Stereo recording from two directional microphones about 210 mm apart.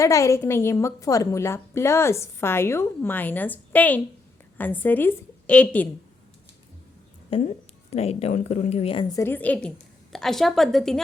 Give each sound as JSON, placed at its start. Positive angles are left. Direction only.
{"t": 0.0, "sound": "a woman's voice", "side_deg": 15}
{"t": 7.3, "sound": "a woman's voice", "side_deg": 25}